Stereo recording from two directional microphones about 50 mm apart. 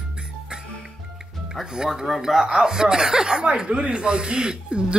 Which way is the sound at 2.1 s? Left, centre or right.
Centre.